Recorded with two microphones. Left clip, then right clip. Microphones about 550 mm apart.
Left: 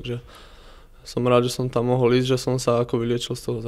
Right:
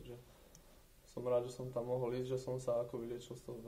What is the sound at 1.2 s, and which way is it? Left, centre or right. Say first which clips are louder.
Speech: left 17 dB; left.